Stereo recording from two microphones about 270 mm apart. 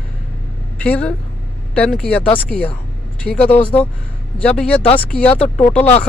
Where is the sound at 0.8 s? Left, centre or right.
Centre.